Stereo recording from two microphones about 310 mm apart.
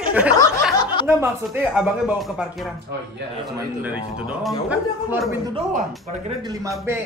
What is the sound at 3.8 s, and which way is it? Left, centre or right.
Speech, centre.